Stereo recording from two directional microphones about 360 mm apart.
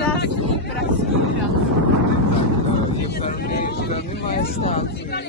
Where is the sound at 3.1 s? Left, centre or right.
Left.